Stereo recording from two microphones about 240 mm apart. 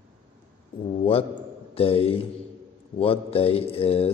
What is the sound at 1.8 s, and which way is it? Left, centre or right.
A man's voice, left.